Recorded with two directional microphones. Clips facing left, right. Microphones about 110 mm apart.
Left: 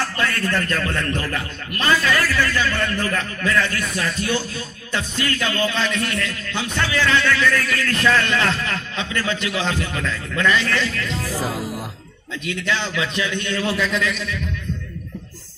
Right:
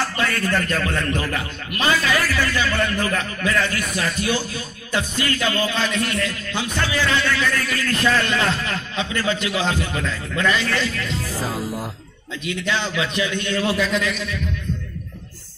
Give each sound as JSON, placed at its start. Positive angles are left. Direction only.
{"t": 0.2, "sound": "a man's voice", "side_deg": -15}
{"t": 5.6, "sound": "a man's voice", "side_deg": -15}
{"t": 12.6, "sound": "a man's voice", "side_deg": -15}